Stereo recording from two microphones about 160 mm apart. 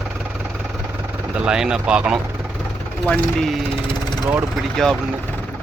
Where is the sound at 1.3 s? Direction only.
5° right (ahead or behind).